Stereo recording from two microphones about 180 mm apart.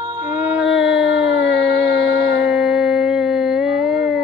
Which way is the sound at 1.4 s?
20° right (ahead or behind).